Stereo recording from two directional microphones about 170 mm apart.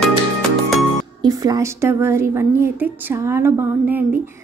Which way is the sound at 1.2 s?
20° right (ahead or behind).